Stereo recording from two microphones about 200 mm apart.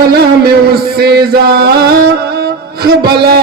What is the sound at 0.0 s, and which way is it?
Music, 50° right (ahead or behind).